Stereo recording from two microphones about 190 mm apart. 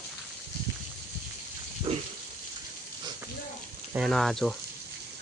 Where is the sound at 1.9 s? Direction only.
30° right (ahead or behind).